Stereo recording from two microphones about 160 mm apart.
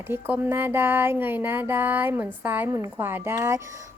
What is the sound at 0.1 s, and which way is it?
A woman's voice, 15° right (ahead or behind).